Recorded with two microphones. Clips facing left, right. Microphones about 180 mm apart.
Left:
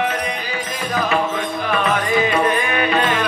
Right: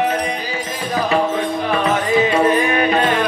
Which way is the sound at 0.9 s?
30° right (ahead or behind).